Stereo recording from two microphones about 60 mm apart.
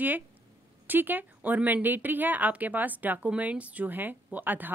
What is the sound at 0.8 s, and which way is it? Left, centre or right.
Speech, right.